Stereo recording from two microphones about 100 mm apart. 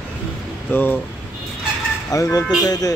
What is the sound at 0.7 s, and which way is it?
Speech, 20° left (ahead or behind).